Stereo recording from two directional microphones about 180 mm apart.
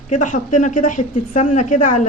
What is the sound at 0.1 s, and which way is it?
A woman's voice, 45° left (ahead or behind).